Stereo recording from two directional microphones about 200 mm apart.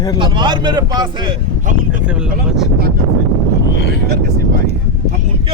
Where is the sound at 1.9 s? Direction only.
5° right (ahead or behind).